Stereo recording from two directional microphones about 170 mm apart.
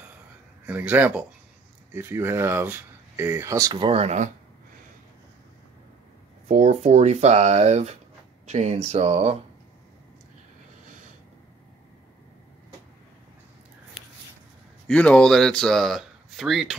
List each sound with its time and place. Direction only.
0.7 s speech: 10° right (ahead or behind); by 4.3 s 40° right (ahead or behind)
6.4 s speech: 45° right (ahead or behind)
14.9 s speech: 5° left (ahead or behind)